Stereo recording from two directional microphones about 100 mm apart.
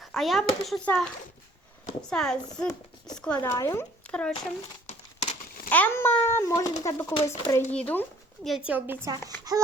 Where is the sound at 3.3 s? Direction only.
30° left (ahead or behind).